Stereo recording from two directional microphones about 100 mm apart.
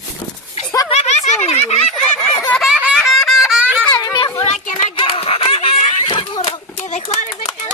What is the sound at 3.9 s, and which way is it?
Children playing, 40° left (ahead or behind).